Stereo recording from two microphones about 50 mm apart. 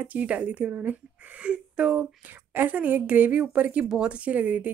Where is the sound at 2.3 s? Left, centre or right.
Right.